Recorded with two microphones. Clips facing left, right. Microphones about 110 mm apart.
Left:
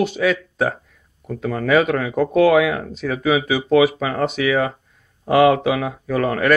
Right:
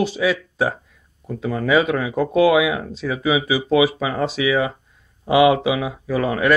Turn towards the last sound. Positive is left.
turn(degrees=-10)  # may be behind; listen again after turning